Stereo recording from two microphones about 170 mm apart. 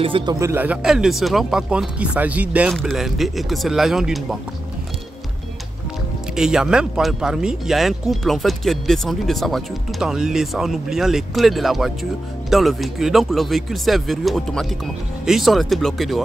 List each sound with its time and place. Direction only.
0.0 s speech: 30° right (ahead or behind); by 4.4 s centre (ahead or behind)
6.3 s speech: 5° right (ahead or behind)